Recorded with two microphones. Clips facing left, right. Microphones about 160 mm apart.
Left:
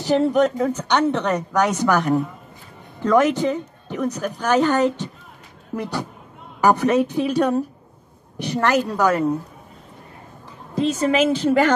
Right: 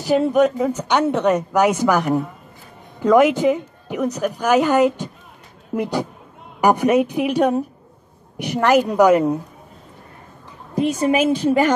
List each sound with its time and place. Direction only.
0.0 s speech: 10° right (ahead or behind)
10.7 s speech: 15° right (ahead or behind)